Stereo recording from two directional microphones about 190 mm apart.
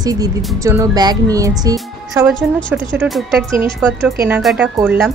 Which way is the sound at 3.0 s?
Centre (ahead or behind).